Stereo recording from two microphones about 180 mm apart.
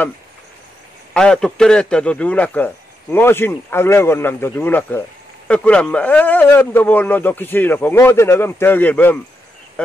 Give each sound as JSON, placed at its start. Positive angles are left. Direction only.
{"t": 1.1, "sound": "a man's voice", "side_deg": 5}